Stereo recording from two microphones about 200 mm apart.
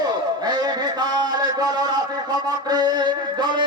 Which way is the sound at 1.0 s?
20° right (ahead or behind).